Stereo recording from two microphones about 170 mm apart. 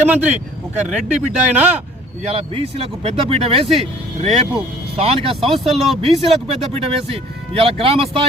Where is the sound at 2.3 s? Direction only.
35° right (ahead or behind).